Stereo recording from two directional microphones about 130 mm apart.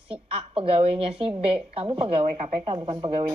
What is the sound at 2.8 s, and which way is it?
Speech, 30° right (ahead or behind).